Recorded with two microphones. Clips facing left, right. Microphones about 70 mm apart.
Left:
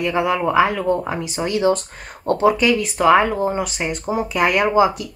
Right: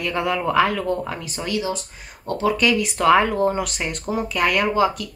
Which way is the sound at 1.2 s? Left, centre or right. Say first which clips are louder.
Left 4 dB; left.